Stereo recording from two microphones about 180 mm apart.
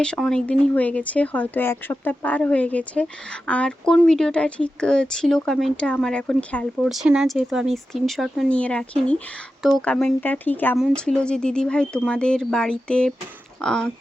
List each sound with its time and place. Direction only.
0.0 s speech: 5° left (ahead or behind)
6.8 s speech: 5° right (ahead or behind)